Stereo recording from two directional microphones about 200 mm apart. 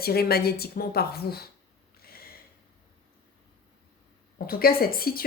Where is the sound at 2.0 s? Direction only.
50° left (ahead or behind).